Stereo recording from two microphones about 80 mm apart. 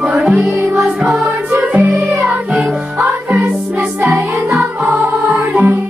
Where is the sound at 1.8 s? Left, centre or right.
Right.